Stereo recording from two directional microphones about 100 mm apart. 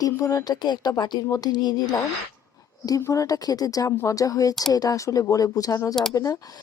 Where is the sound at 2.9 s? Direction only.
30° left (ahead or behind).